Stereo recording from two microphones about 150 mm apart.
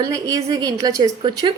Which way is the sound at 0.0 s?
25° right (ahead or behind).